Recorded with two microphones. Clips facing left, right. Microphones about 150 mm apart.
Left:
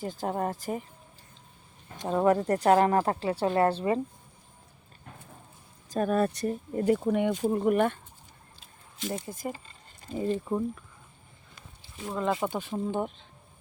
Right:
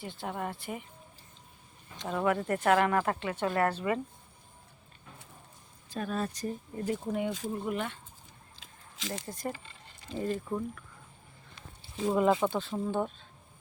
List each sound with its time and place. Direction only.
0.0 s a woman's voice: 40° left (ahead or behind)
2.0 s a woman's voice: 35° left (ahead or behind)
5.9 s speech: 50° left (ahead or behind)
8.5 s a sound: 90° right
9.2 s speech: 10° left (ahead or behind)
9.5 s a sound: 40° left (ahead or behind)
10.2 s speech: 25° left (ahead or behind)
12.0 s speech: 10° right (ahead or behind)
12.4 s speech: 15° left (ahead or behind)